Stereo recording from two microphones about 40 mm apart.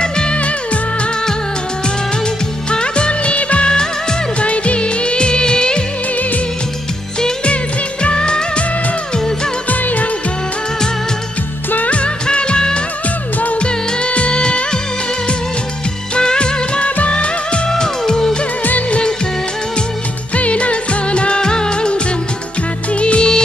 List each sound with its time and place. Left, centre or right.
0.0 s music: left
2.7 s music of bollywood: left
8.0 s music of bollywood: left
9.7 s music of bollywood: left
11.7 s music: left
13.6 s music of bollywood: left
16.2 s music: centre
17.6 s music: centre
18.6 s music of bollywood: left
18.9 s music of bollywood: left
20.3 s music of bollywood: left
22.9 s music: left